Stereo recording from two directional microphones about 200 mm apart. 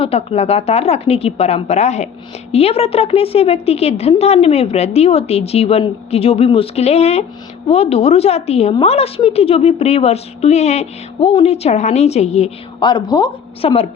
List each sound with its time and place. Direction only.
0.0 s a woman's voice: 30° left (ahead or behind)